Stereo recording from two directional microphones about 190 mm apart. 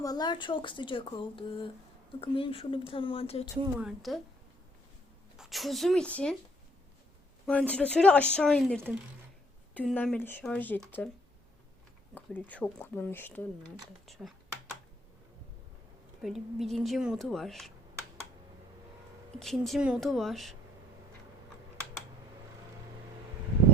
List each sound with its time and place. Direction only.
0.0 s a woman's voice: 20° left (ahead or behind)
3.8 s a woman's voice: centre (ahead or behind)
5.4 s a woman's voice: centre (ahead or behind)
7.4 s a woman's voice: 5° left (ahead or behind)
12.1 s speech: 10° left (ahead or behind)
14.1 s computer keyboard: centre (ahead or behind)
16.2 s a woman's voice: centre (ahead or behind)
19.4 s a woman's voice: centre (ahead or behind)